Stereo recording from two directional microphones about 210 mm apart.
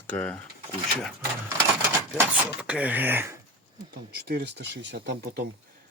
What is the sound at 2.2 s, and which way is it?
Speech, 5° right (ahead or behind).